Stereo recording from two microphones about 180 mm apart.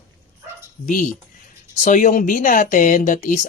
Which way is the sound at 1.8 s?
45° left (ahead or behind).